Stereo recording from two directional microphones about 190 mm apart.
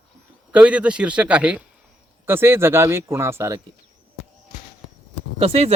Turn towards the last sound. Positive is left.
turn(degrees=-30)  # may be behind; listen again after turning